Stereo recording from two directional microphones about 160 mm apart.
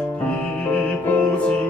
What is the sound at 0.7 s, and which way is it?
Music, 10° left (ahead or behind).